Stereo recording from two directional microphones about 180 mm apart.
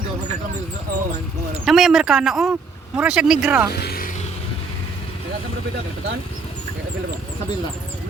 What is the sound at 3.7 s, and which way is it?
Music, 60° left (ahead or behind).